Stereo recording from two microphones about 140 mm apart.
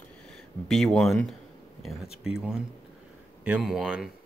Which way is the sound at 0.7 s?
5° left (ahead or behind).